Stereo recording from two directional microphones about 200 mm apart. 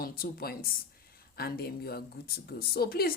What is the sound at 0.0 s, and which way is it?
A woman's voice, 50° left (ahead or behind).